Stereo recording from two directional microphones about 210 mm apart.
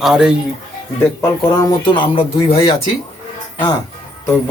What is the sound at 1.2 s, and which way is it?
Speech, 15° left (ahead or behind).